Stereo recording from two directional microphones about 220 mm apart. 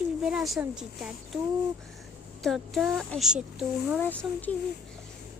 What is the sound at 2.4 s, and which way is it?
A child's voice, centre (ahead or behind).